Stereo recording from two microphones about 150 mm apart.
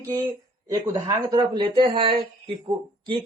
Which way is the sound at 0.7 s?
25° right (ahead or behind).